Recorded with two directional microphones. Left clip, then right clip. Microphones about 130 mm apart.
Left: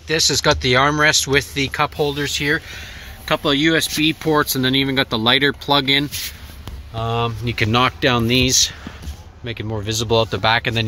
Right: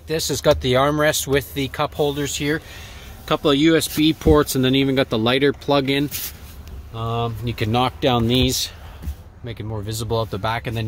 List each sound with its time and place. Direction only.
0.1 s speech: 25° right (ahead or behind)
7.0 s speech: 5° right (ahead or behind)
9.5 s speech: 10° left (ahead or behind)